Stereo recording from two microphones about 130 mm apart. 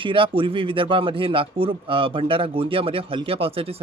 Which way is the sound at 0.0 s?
40° right (ahead or behind).